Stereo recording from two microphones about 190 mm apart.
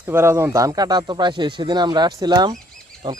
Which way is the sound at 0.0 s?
15° right (ahead or behind).